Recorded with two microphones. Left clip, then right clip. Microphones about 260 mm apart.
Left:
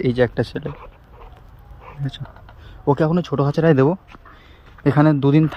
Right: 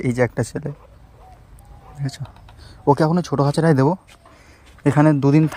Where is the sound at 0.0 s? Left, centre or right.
Right.